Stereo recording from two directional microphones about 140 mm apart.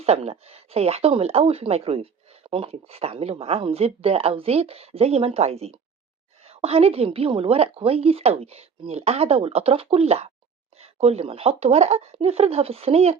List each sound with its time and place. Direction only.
0.0 s a woman's voice: 50° right (ahead or behind)